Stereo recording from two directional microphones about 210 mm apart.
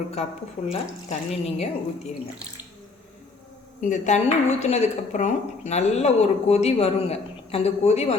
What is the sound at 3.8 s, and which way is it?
Speech, 35° left (ahead or behind).